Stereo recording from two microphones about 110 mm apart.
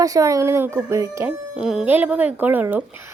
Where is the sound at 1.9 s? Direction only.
15° right (ahead or behind).